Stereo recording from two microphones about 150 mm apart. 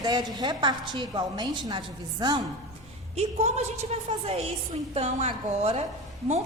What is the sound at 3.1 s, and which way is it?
A woman's voice, 45° right (ahead or behind).